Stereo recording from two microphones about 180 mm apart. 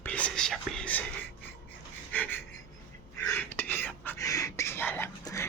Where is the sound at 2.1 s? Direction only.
10° left (ahead or behind).